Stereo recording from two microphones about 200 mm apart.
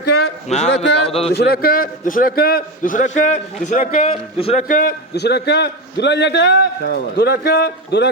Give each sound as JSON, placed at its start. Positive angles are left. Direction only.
{"t": 0.0, "sound": "a sound", "side_deg": 55}
{"t": 0.4, "sound": "a man's voice", "side_deg": 35}
{"t": 1.3, "sound": "a man's voice", "side_deg": 55}
{"t": 4.1, "sound": "a man's voice", "side_deg": 30}
{"t": 4.7, "sound": "a man's voice", "side_deg": 45}